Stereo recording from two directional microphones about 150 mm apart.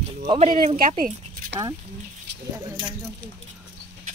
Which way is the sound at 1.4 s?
70° right (ahead or behind).